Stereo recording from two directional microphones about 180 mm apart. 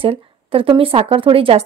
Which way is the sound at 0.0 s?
30° right (ahead or behind).